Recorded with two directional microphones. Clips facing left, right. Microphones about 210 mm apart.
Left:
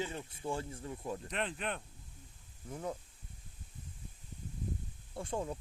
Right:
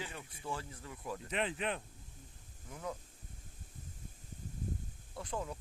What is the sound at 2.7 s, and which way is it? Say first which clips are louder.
Speech: left 3 dB; 35° left (ahead or behind).